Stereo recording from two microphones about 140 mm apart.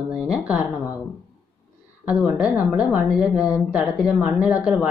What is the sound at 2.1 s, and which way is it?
Speech, 10° right (ahead or behind).